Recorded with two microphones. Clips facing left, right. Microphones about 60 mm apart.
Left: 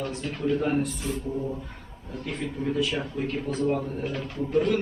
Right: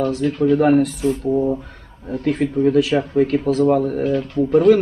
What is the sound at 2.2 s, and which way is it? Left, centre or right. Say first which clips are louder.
A man's voice: right 13 dB; right.